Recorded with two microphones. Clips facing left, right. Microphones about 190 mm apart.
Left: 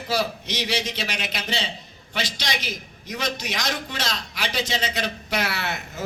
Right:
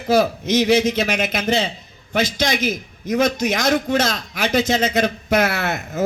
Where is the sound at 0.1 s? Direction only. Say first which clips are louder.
Right 10 dB; 50° right (ahead or behind).